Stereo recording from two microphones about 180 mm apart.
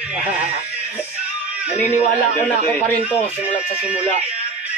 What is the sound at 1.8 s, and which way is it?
Speech, 40° left (ahead or behind).